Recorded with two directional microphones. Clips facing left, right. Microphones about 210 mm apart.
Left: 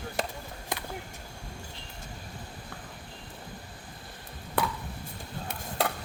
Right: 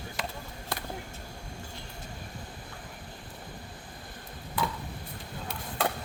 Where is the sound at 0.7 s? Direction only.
15° left (ahead or behind).